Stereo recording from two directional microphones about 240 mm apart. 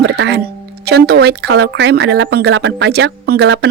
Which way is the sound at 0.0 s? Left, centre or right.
Right.